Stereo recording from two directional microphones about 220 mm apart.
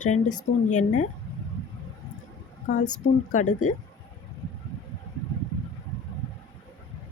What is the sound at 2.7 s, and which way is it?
Speech, 35° left (ahead or behind).